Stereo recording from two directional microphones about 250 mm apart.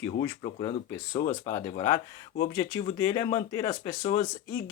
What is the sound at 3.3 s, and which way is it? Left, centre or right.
Speech, centre.